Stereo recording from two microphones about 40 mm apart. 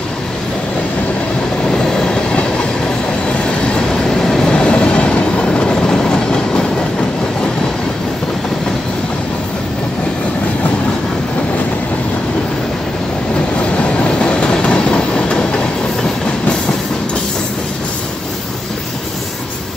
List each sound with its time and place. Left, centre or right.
1.7 s train: centre
3.6 s train: centre
13.6 s train: left